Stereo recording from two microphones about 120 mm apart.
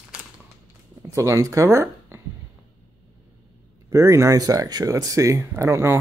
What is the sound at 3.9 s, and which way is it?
Speech, 25° right (ahead or behind).